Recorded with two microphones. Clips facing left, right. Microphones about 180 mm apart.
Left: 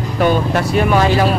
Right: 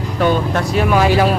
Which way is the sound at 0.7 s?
Centre (ahead or behind).